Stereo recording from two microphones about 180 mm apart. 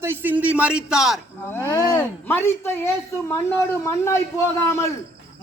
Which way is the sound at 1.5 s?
10° left (ahead or behind).